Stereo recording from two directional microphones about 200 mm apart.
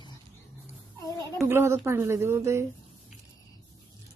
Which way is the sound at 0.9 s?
15° left (ahead or behind).